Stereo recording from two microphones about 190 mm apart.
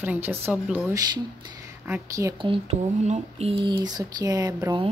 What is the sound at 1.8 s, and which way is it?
Speech, 15° right (ahead or behind).